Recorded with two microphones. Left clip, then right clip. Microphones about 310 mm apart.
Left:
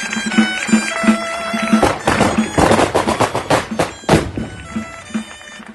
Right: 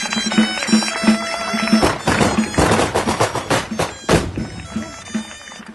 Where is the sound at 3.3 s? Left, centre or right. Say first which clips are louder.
Left 3 dB; left.